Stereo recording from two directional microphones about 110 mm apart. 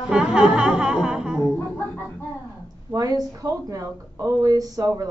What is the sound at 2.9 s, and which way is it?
Speech, 30° right (ahead or behind).